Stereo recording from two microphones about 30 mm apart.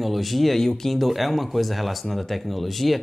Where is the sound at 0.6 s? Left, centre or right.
Centre.